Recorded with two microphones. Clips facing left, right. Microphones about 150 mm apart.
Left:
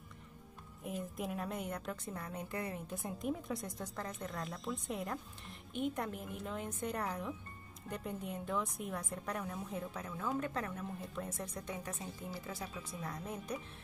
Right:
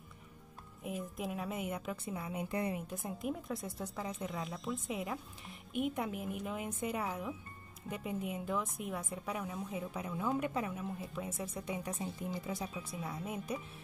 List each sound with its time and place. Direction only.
0.8 s speech: centre (ahead or behind)
2.5 s a woman's voice: 20° right (ahead or behind)
2.9 s a woman's voice: centre (ahead or behind)